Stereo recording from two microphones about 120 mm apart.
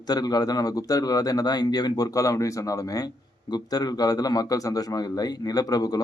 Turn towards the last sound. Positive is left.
turn(degrees=30)  # may be behind; listen again after turning